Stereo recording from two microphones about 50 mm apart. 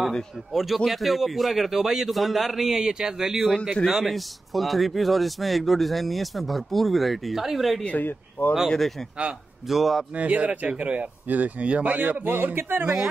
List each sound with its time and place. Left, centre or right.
0.5 s a man's voice: centre
3.8 s a man's voice: centre
7.8 s speech: left
8.6 s a man's voice: centre
10.1 s speech: right